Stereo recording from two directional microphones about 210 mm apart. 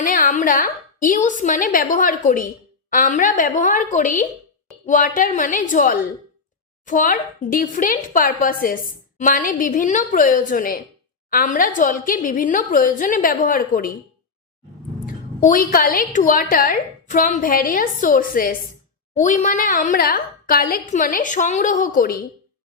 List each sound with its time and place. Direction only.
0.0 s a woman's voice: 40° left (ahead or behind)
15.0 s a woman's voice: 40° left (ahead or behind)